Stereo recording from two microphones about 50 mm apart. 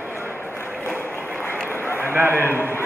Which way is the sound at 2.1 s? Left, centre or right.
Right.